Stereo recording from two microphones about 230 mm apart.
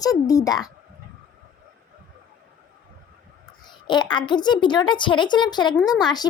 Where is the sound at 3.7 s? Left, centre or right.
Centre.